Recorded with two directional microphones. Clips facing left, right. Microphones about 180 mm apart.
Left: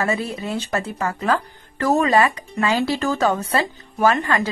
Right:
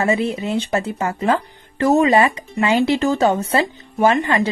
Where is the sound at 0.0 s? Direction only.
20° right (ahead or behind).